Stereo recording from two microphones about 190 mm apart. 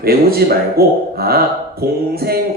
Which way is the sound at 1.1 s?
55° right (ahead or behind).